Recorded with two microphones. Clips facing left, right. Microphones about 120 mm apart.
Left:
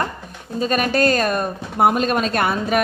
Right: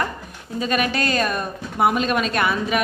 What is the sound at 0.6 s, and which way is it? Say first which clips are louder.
A woman's voice: left 4 dB; 40° left (ahead or behind).